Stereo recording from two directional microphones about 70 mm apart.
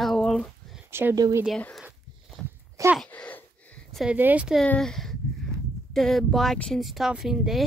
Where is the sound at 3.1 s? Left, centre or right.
Left.